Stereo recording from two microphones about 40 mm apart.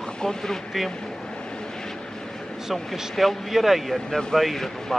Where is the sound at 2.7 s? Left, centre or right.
Centre.